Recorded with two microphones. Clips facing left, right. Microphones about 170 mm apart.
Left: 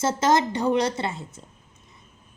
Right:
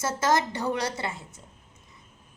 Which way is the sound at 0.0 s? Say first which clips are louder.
Left 4 dB; 20° left (ahead or behind).